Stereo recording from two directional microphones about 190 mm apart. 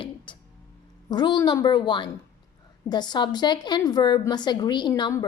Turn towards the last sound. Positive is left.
turn(degrees=20)  # may be behind; listen again after turning